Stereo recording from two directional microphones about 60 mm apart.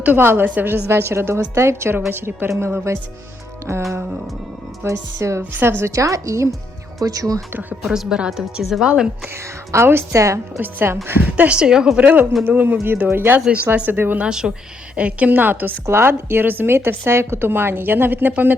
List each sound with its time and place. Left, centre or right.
0.0 s a woman's voice: right
4.8 s speech: right
5.6 s a woman's voice: right
5.9 s speech: right
7.0 s speech: right
7.8 s a woman's voice: centre
9.3 s a woman's voice: right
10.6 s a woman's voice: right; by 11.9 s centre
11.9 s a woman's voice: right
12.2 s a woman's voice: centre
12.5 s a woman's voice: right
14.3 s a woman's voice: centre
15.3 s a woman's voice: right
17.1 s a woman's voice: right